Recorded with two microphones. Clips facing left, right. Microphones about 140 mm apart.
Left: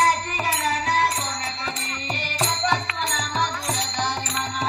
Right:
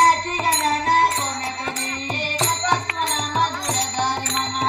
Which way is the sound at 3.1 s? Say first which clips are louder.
Right 3 dB; 50° right (ahead or behind).